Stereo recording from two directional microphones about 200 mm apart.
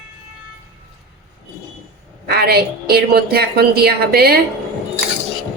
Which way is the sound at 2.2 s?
50° right (ahead or behind).